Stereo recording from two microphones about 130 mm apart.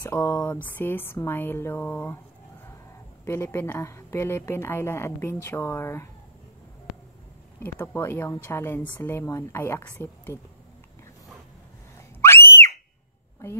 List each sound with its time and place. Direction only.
0.0 s speech: 20° left (ahead or behind)
3.3 s a woman's voice: 15° left (ahead or behind)
7.6 s a woman's voice: 15° left (ahead or behind)
12.2 s a sound: 20° left (ahead or behind)